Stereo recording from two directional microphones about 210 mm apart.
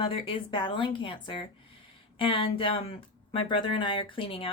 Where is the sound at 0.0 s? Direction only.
25° left (ahead or behind).